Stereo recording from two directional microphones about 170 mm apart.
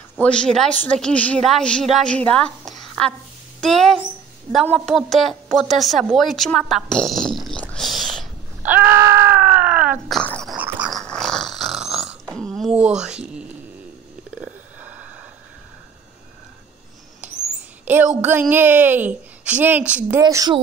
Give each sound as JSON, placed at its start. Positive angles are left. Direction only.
{"t": 0.2, "sound": "a woman's voice", "side_deg": 5}
{"t": 8.6, "sound": "screaming", "side_deg": -10}
{"t": 10.0, "sound": "dog", "side_deg": 5}
{"t": 10.6, "sound": "dog", "side_deg": -5}
{"t": 11.0, "sound": "snoring", "side_deg": 5}
{"t": 13.0, "sound": "a woman's voice", "side_deg": -5}
{"t": 14.8, "sound": "a sound", "side_deg": -10}
{"t": 17.8, "sound": "a sound", "side_deg": -10}
{"t": 18.5, "sound": "a woman's voice", "side_deg": -10}
{"t": 20.2, "sound": "speech", "side_deg": -20}